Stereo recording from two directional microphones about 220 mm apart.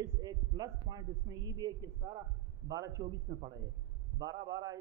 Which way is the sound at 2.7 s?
15° right (ahead or behind).